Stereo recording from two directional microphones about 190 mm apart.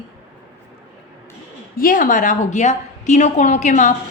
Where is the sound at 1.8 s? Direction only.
45° left (ahead or behind).